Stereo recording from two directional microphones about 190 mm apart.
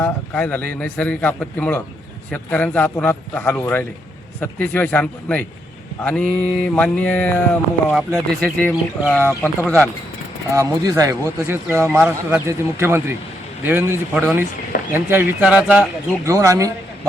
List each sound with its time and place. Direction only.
0.0 s mantra: 10° left (ahead or behind)
10.5 s speech: 15° right (ahead or behind)
16.2 s speech: 15° right (ahead or behind)